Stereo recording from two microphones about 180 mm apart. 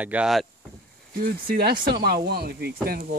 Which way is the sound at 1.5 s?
60° right (ahead or behind).